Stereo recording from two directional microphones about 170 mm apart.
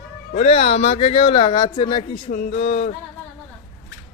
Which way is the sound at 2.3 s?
50° left (ahead or behind).